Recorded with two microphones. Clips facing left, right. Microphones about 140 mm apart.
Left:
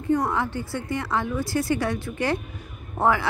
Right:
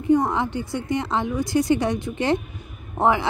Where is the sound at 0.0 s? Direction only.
20° right (ahead or behind).